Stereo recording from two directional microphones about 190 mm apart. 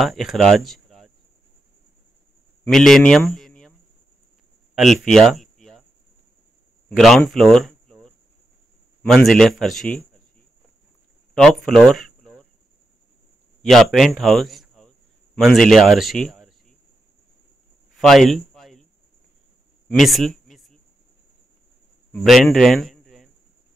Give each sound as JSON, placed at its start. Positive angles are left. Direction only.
{"t": 0.0, "sound": "speech", "side_deg": 0}
{"t": 2.6, "sound": "speech", "side_deg": 0}
{"t": 4.7, "sound": "a sound", "side_deg": 0}
{"t": 6.9, "sound": "speech", "side_deg": 0}
{"t": 11.4, "sound": "speech", "side_deg": 5}
{"t": 13.6, "sound": "a man's voice", "side_deg": 0}
{"t": 17.9, "sound": "a sound", "side_deg": 0}
{"t": 19.9, "sound": "a sound", "side_deg": 0}
{"t": 22.1, "sound": "speech", "side_deg": 0}